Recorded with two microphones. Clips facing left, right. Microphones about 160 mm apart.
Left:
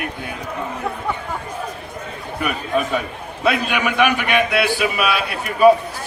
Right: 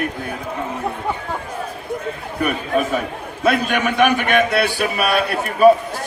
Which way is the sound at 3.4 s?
45° right (ahead or behind).